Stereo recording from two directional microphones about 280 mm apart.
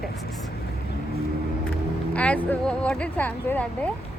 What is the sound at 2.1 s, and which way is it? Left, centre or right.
Speech, centre.